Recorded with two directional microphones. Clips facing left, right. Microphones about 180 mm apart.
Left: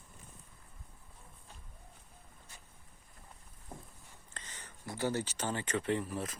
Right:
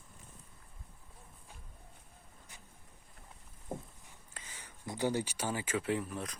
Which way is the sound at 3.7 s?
25° right (ahead or behind).